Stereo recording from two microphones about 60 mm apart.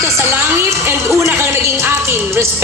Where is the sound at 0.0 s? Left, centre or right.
Right.